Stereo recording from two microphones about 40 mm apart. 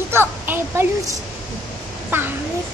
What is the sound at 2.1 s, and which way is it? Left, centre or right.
Speech, right.